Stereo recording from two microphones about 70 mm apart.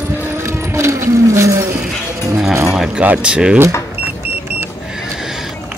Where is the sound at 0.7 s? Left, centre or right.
Right.